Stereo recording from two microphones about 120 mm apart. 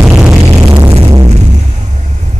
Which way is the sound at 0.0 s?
10° right (ahead or behind).